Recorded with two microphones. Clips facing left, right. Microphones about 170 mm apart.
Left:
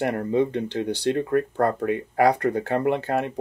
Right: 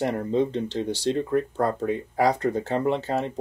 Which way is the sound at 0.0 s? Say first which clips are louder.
Left 1 dB; 60° left (ahead or behind).